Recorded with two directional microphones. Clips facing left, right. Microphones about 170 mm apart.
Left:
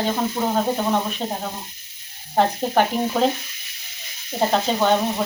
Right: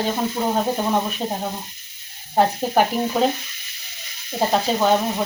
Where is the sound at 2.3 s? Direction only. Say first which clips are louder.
Right 1 dB; 10° right (ahead or behind).